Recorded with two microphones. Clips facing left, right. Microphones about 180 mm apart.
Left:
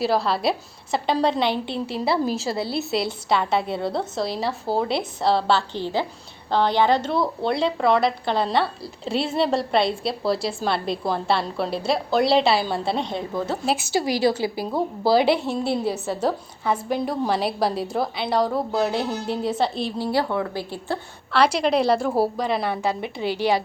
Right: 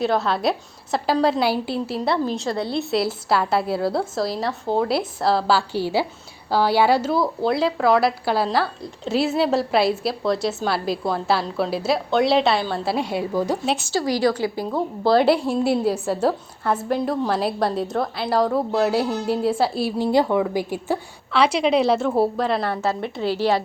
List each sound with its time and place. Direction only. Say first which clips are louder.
0.0 s a woman's voice: right 1 dB; centre (ahead or behind)
13.9 s a woman's voice: right 1 dB; 20° left (ahead or behind)
14.6 s a woman's voice: right 1 dB; 5° left (ahead or behind)
20.0 s a woman's voice: right 5 dB; 15° right (ahead or behind); by 23.6 s centre (ahead or behind)